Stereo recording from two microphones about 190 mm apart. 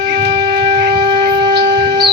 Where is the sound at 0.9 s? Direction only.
20° right (ahead or behind).